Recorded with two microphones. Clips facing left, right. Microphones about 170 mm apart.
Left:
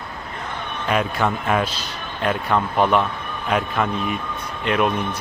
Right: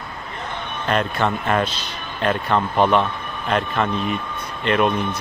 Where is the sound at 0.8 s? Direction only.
5° left (ahead or behind).